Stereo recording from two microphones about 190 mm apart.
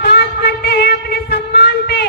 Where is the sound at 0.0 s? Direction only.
60° left (ahead or behind).